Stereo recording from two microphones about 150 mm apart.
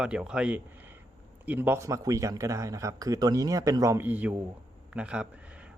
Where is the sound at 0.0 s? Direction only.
5° right (ahead or behind).